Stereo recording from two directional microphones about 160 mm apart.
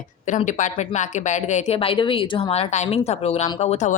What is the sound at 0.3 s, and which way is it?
A woman's voice, 50° left (ahead or behind).